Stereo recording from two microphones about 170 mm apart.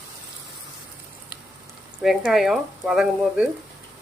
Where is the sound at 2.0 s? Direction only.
Centre (ahead or behind).